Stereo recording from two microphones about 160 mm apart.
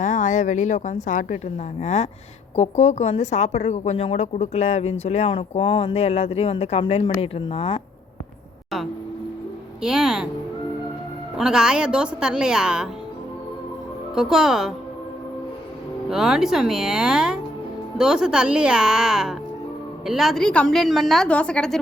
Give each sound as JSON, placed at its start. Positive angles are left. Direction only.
{"t": 0.0, "sound": "a woman's voice", "side_deg": 50}
{"t": 9.8, "sound": "a woman's voice", "side_deg": -5}
{"t": 11.3, "sound": "a woman's voice", "side_deg": -5}
{"t": 14.2, "sound": "a woman's voice", "side_deg": -5}
{"t": 16.0, "sound": "a woman's voice", "side_deg": -5}